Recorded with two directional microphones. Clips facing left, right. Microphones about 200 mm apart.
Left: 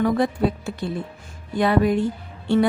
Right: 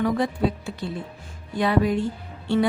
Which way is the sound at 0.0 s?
50° left (ahead or behind).